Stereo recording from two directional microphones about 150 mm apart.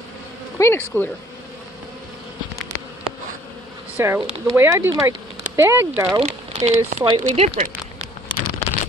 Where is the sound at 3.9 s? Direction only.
15° right (ahead or behind).